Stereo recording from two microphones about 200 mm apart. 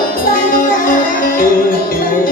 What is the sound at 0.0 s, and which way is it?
Music, 45° left (ahead or behind).